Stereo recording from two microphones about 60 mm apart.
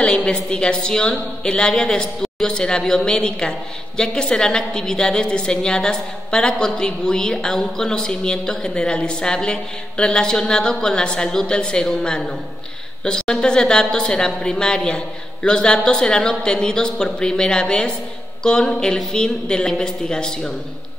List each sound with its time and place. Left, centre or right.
0.0 s a woman's voice: centre